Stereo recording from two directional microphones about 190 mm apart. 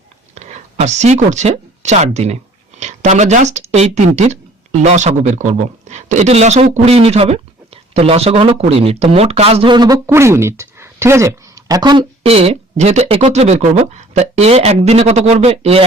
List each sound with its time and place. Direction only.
0.3 s speech: 35° right (ahead or behind)